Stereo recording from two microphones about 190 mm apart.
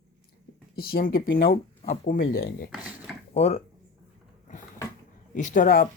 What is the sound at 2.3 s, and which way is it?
Speech, 50° left (ahead or behind).